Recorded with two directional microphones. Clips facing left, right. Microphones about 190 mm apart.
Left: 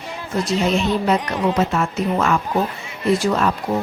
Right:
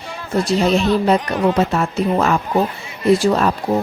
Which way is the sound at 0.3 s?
35° right (ahead or behind).